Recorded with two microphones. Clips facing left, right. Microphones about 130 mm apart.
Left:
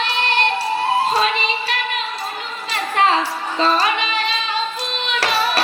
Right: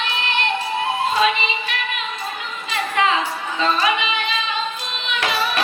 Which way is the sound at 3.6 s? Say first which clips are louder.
Left 2 dB; 35° left (ahead or behind).